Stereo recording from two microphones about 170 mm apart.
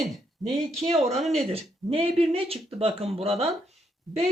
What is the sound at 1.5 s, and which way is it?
Speech, 35° right (ahead or behind).